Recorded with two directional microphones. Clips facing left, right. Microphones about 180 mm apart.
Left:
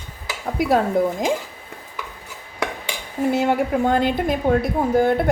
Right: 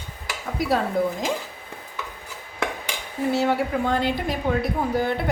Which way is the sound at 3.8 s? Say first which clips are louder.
Left 4 dB; 50° left (ahead or behind).